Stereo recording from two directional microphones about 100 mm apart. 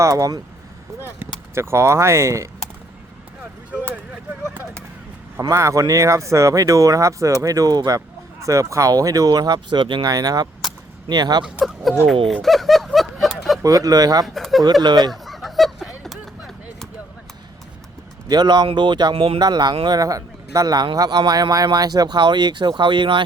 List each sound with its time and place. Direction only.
0.0 s speech: 30° right (ahead or behind)
1.0 s speech: 25° right (ahead or behind)
5.4 s speech: 30° right (ahead or behind)
11.6 s speech: centre (ahead or behind)
12.3 s a sound: centre (ahead or behind)
13.6 s speech: 35° right (ahead or behind)
14.3 s speech: centre (ahead or behind)
14.6 s speech: 45° right (ahead or behind)
15.1 s a sound: centre (ahead or behind)
18.3 s speech: 45° right (ahead or behind)
19.1 s speech: 65° right (ahead or behind)
19.4 s speech: 45° right (ahead or behind)